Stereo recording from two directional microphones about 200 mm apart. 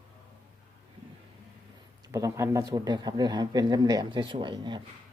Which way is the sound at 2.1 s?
15° right (ahead or behind).